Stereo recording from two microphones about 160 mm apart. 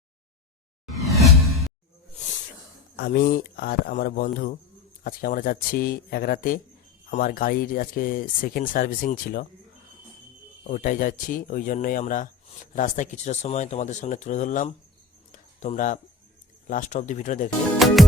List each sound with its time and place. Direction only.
1.0 s whoosh: centre (ahead or behind)
2.9 s speech: 70° left (ahead or behind)
10.7 s speech: 60° left (ahead or behind)
17.7 s music: centre (ahead or behind)